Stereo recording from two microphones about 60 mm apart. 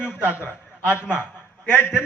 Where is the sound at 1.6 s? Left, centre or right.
Left.